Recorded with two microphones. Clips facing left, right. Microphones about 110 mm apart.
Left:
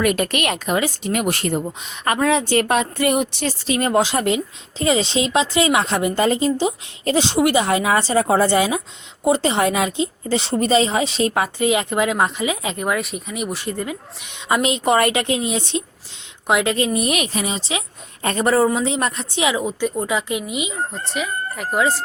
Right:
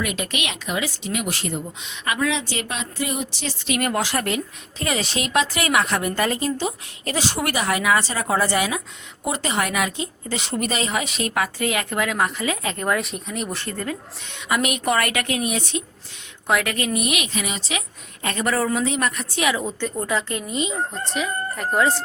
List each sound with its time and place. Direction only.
0.0 s speech: 50° left (ahead or behind)
3.7 s a woman's voice: 25° left (ahead or behind)
12.9 s speech: centre (ahead or behind)
14.4 s a woman's voice: 25° left (ahead or behind); by 22.0 s 5° left (ahead or behind)